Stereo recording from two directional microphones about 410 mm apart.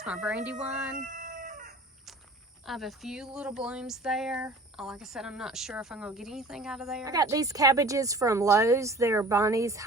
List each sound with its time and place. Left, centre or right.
0.0 s speech: centre
0.9 s chicken: centre
2.6 s speech: centre